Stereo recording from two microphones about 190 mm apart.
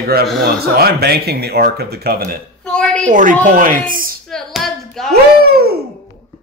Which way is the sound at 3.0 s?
45° right (ahead or behind).